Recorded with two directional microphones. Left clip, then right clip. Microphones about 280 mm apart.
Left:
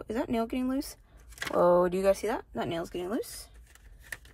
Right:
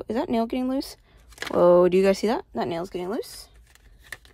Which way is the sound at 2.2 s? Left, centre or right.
Right.